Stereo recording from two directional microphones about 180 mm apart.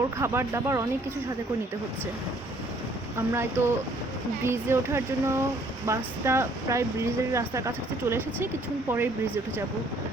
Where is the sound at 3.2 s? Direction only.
15° right (ahead or behind).